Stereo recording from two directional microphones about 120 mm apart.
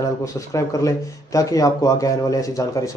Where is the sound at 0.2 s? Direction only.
25° left (ahead or behind).